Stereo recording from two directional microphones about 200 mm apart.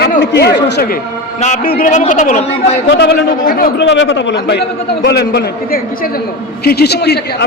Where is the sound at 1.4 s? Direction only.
35° left (ahead or behind).